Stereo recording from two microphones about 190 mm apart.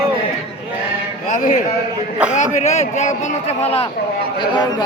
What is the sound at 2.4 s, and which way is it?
Speech, 35° left (ahead or behind).